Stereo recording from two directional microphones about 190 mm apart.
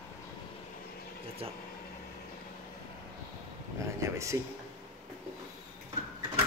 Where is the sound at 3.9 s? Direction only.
15° right (ahead or behind).